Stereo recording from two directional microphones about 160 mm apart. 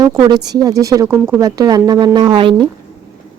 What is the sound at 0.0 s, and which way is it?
Speech, 25° right (ahead or behind).